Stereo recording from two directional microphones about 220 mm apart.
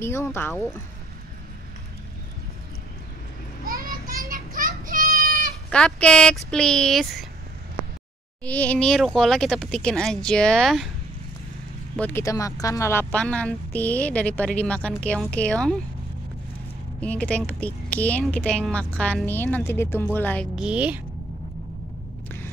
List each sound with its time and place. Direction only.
0.0 s a woman's voice: 10° left (ahead or behind)
3.6 s child singing: 40° right (ahead or behind)
5.7 s speech: 5° left (ahead or behind)
8.5 s speech: 5° left (ahead or behind)
12.0 s a woman's voice: 10° left (ahead or behind)
17.0 s a woman's voice: 5° left (ahead or behind)
20.5 s speech: 5° right (ahead or behind)